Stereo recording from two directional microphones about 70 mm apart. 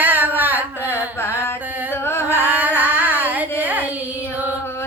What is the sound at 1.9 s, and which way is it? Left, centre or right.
Music, left.